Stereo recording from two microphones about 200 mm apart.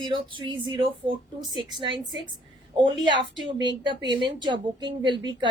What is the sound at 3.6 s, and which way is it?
A woman's voice, 25° right (ahead or behind).